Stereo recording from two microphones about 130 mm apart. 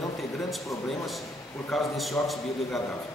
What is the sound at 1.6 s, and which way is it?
Speech, centre (ahead or behind).